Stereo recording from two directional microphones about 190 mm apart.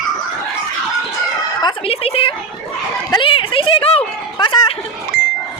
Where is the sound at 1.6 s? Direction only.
30° left (ahead or behind).